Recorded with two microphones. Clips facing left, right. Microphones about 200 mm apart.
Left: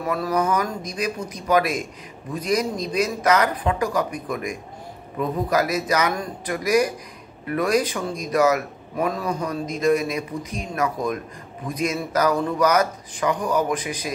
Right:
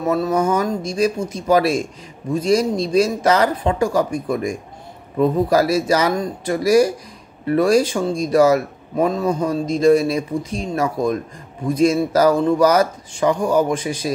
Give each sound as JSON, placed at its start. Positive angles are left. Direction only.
{"t": 0.0, "sound": "speech", "side_deg": -25}